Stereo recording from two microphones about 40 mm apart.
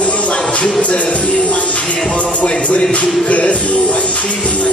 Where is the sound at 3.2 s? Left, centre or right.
Left.